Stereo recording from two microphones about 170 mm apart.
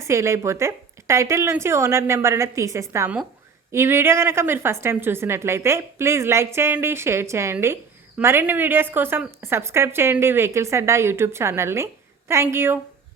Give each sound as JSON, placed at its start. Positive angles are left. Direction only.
{"t": 0.0, "sound": "a woman's voice", "side_deg": -15}